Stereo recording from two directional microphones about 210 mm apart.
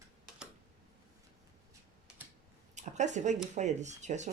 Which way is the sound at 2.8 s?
35° right (ahead or behind).